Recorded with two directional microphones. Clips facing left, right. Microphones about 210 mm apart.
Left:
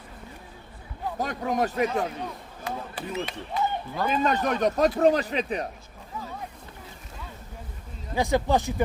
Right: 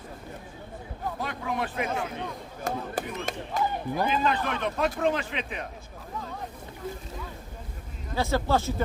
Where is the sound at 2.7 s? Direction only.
45° right (ahead or behind).